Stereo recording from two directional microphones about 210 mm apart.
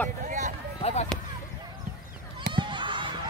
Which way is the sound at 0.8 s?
30° left (ahead or behind).